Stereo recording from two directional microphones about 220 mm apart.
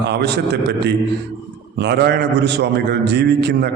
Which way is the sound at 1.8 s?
50° right (ahead or behind).